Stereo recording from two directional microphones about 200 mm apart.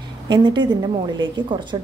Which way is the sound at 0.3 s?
20° right (ahead or behind).